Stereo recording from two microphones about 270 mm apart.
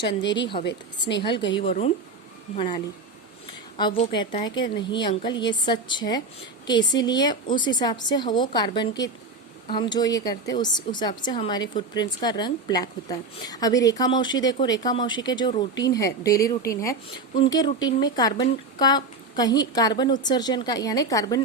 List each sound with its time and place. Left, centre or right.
0.2 s a woman's voice: centre
0.6 s speech: left
1.5 s a woman's voice: left